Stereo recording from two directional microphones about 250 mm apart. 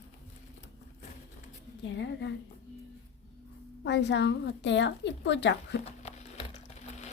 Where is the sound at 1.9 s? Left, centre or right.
Left.